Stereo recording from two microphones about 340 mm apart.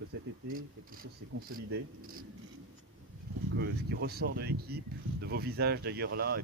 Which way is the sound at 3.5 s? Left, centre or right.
Right.